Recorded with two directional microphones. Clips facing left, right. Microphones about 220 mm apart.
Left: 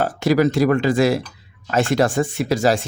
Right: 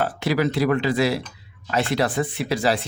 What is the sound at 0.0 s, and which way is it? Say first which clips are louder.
Speech: left 5 dB; 45° left (ahead or behind).